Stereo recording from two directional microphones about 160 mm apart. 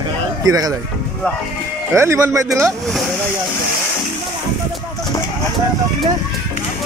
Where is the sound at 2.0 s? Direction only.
15° right (ahead or behind).